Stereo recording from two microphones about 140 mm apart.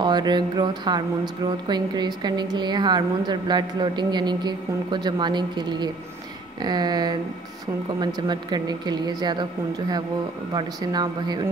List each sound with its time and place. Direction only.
0.0 s a woman's voice: 30° right (ahead or behind)